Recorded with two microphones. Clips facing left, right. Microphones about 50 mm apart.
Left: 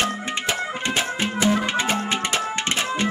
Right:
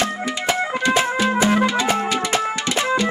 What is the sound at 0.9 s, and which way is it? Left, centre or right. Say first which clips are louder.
Music: right 6 dB; right.